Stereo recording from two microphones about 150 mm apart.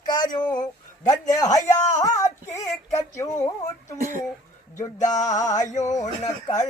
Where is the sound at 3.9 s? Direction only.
60° right (ahead or behind).